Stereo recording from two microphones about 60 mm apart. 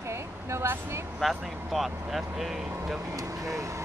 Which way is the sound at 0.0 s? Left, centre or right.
Right.